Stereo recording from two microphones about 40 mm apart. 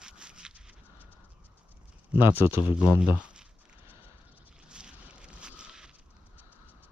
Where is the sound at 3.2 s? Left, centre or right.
Right.